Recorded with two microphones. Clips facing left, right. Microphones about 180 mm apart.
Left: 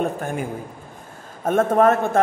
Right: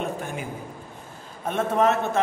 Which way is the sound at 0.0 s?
50° left (ahead or behind).